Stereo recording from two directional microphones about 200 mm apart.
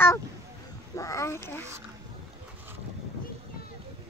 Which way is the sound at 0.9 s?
15° left (ahead or behind).